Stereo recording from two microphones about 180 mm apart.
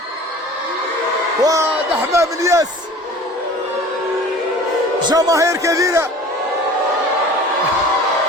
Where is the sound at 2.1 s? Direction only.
15° right (ahead or behind).